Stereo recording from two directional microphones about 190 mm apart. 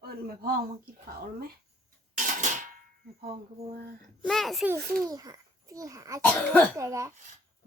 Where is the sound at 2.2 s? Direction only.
40° right (ahead or behind).